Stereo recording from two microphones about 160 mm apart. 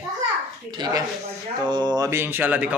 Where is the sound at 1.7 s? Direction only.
25° right (ahead or behind); by 2.7 s 10° right (ahead or behind).